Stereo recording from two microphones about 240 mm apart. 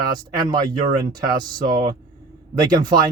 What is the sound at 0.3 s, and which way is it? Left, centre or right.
Speech, centre.